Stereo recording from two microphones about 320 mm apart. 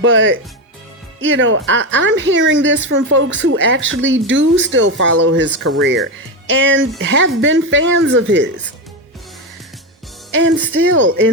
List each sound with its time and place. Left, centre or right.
0.0 s a woman's voice: right
10.3 s a woman's voice: right